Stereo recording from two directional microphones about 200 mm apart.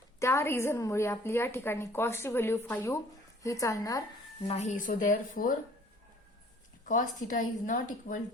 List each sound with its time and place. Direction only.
0.2 s a woman's voice: 15° left (ahead or behind)
4.4 s speech: 35° left (ahead or behind)
6.8 s speech: 40° left (ahead or behind)